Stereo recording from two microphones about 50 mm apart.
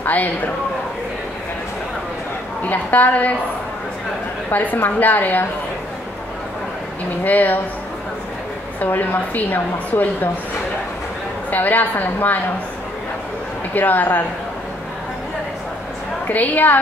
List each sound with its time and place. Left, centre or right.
0.0 s a man's voice: left
2.6 s a woman's voice: left
4.5 s a woman's voice: left
7.2 s a woman's voice: left
8.8 s a woman's voice: left
11.5 s a woman's voice: left
13.7 s a woman's voice: left
16.3 s a woman's voice: left